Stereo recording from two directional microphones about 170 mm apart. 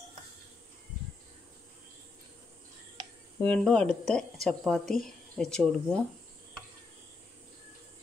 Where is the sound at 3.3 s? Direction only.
10° left (ahead or behind).